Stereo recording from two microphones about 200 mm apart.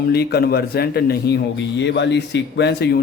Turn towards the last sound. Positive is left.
turn(degrees=55)  # may be behind; listen again after turning